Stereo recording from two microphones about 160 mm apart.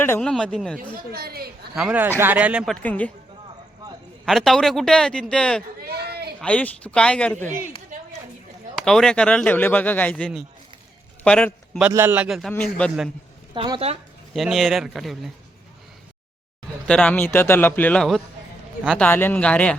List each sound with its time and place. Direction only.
0.2 s a man's voice: 5° left (ahead or behind)
1.1 s a woman's voice: 75° right (ahead or behind)
1.7 s speech: 5° right (ahead or behind)
2.8 s speech: 10° left (ahead or behind)
4.3 s a man's voice: centre (ahead or behind)
5.8 s a sound: 75° right (ahead or behind)
6.4 s speech: 10° left (ahead or behind)
8.7 s speech: 5° left (ahead or behind)
11.2 s a sound: 5° left (ahead or behind)
11.8 s speech: 15° right (ahead or behind)
12.6 s a man's voice: 5° left (ahead or behind)
13.5 s speech: 35° right (ahead or behind)
14.3 s a man's voice: centre (ahead or behind)
16.8 s speech: 5° left (ahead or behind)